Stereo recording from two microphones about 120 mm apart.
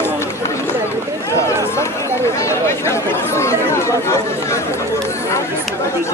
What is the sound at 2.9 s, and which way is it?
Chatter, 25° left (ahead or behind).